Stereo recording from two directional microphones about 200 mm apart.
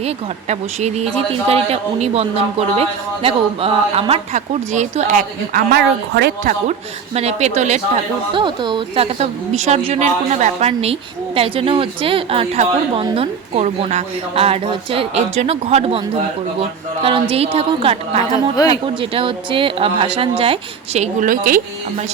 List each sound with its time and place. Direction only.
0.0 s speech: 35° right (ahead or behind)
8.3 s a woman's voice: 25° right (ahead or behind)
18.6 s speech: 20° left (ahead or behind)
19.1 s a woman's voice: 25° right (ahead or behind); by 21.6 s 45° right (ahead or behind)